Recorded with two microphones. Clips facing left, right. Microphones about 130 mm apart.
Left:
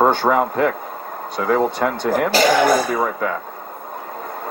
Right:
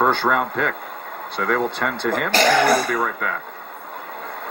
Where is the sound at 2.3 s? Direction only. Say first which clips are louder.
Left 1 dB; 10° left (ahead or behind).